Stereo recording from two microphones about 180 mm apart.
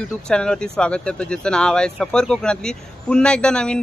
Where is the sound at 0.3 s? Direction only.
5° left (ahead or behind).